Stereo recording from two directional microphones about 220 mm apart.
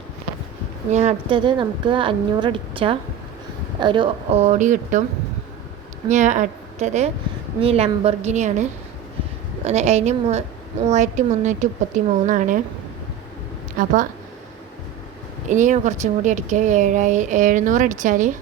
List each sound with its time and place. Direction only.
0.9 s a woman's voice: 30° right (ahead or behind)
6.1 s a woman's voice: 35° right (ahead or behind)
9.6 s speech: 30° right (ahead or behind)
13.7 s speech: 35° right (ahead or behind)
15.4 s speech: 35° right (ahead or behind)